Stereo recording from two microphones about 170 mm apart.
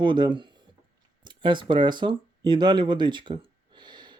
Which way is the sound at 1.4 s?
25° right (ahead or behind).